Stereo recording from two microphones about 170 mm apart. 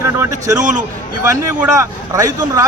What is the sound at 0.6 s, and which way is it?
Speech, 45° right (ahead or behind).